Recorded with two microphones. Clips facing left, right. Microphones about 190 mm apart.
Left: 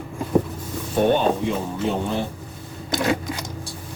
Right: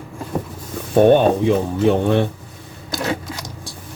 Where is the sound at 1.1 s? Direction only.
60° right (ahead or behind).